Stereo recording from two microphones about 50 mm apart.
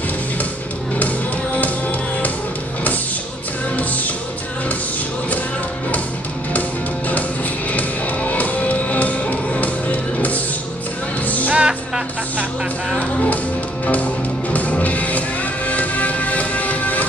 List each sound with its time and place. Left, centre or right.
1.6 s music: left
3.7 s music: left
7.7 s music: left
11.5 s music: centre
13.8 s music: left